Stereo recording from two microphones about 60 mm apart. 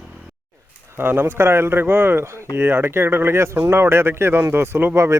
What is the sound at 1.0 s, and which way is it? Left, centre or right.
Speech, right.